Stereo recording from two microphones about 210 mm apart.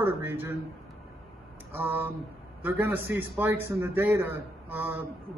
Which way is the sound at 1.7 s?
10° right (ahead or behind).